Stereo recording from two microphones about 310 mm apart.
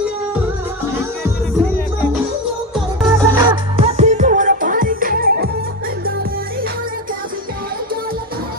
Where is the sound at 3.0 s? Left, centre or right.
Centre.